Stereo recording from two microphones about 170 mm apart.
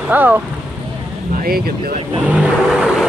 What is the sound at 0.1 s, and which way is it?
Speech, 10° right (ahead or behind).